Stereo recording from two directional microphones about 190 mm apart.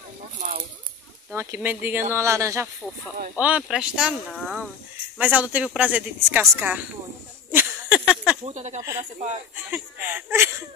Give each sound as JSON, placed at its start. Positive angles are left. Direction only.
{"t": 0.4, "sound": "speech", "side_deg": -45}
{"t": 1.3, "sound": "a woman's voice", "side_deg": -10}
{"t": 7.5, "sound": "a sound", "side_deg": -5}
{"t": 8.5, "sound": "speech", "side_deg": -35}
{"t": 9.7, "sound": "a woman's voice", "side_deg": -10}